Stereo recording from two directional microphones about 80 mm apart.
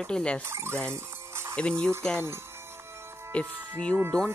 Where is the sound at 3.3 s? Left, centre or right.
Centre.